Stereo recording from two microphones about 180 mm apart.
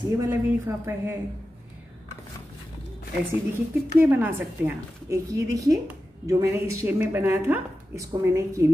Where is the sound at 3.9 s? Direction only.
10° right (ahead or behind).